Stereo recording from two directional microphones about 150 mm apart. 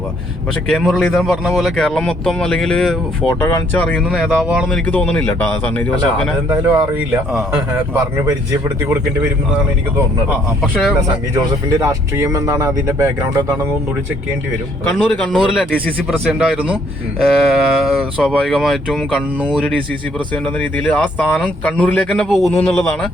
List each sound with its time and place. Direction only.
0.7 s speech: centre (ahead or behind)
4.0 s speech: 5° right (ahead or behind)
4.7 s speech: 10° left (ahead or behind)
6.5 s speech: 10° right (ahead or behind)
10.6 s speech: centre (ahead or behind)
11.3 s speech: 25° right (ahead or behind)
14.9 s speech: centre (ahead or behind)
19.6 s speech: 10° left (ahead or behind)